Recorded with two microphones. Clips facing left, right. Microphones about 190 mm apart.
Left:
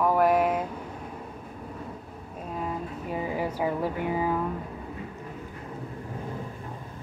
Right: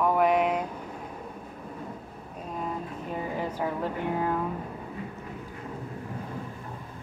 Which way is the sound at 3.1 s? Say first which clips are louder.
Left 2 dB; 10° left (ahead or behind).